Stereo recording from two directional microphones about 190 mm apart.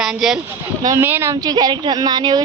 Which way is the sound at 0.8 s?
15° right (ahead or behind).